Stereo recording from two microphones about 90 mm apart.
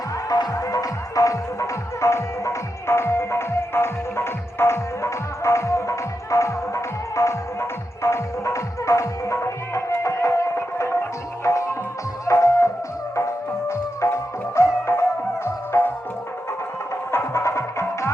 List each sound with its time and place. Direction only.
0.3 s music: 45° left (ahead or behind); by 15.9 s 25° left (ahead or behind)
17.1 s music: 30° left (ahead or behind)